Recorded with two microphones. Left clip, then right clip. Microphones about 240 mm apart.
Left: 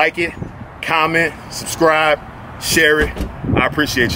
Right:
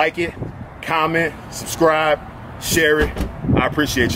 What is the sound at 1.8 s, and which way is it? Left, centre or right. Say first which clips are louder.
Speech: left 2 dB; centre.